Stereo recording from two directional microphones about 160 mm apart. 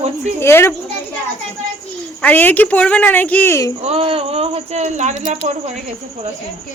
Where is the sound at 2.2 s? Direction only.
10° left (ahead or behind).